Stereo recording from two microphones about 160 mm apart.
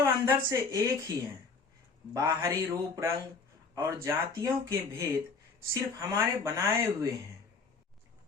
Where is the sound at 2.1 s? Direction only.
25° right (ahead or behind).